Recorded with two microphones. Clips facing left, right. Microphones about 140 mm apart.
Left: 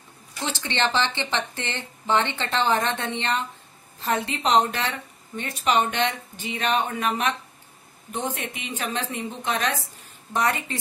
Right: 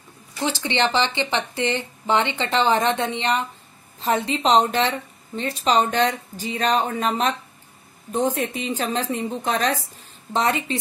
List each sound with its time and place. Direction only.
0.5 s a woman's voice: 15° right (ahead or behind); by 9.8 s 35° right (ahead or behind)
10.3 s a woman's voice: 25° right (ahead or behind)